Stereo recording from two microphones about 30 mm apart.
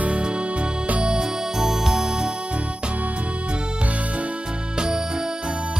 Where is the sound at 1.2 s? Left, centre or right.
Centre.